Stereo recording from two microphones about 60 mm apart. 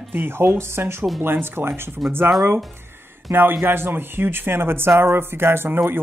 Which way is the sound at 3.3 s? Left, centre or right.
Right.